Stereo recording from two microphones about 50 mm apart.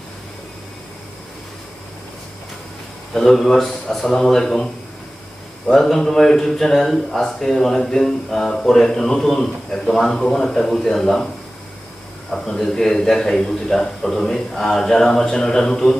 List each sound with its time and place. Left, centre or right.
3.2 s speech: centre
12.3 s a man's voice: centre